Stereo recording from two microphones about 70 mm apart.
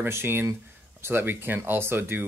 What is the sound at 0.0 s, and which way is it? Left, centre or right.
Speech, right.